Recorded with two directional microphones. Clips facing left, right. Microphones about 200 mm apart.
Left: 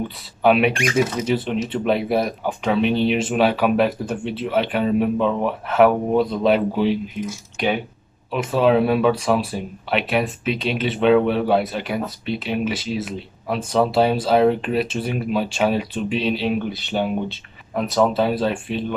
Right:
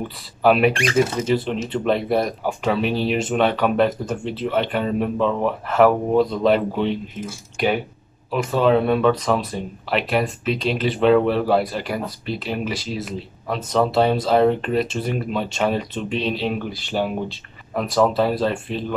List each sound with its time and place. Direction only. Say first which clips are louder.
0.4 s speech: even; centre (ahead or behind)
8.3 s speech: even; centre (ahead or behind)